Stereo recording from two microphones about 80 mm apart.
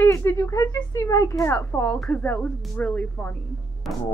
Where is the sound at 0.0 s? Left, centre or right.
Left.